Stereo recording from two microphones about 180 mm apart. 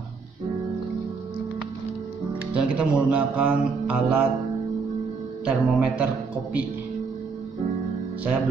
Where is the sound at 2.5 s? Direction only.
5° right (ahead or behind).